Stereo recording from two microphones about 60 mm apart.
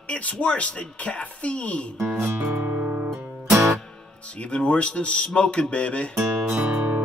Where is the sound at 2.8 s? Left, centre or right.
Centre.